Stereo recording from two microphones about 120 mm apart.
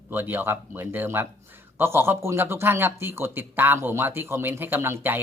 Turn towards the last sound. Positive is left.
turn(degrees=-20)  # may be behind; listen again after turning